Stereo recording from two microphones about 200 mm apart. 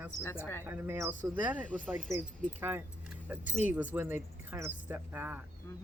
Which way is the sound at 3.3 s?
10° right (ahead or behind).